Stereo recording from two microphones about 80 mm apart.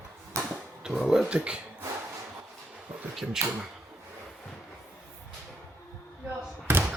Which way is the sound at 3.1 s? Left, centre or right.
Centre.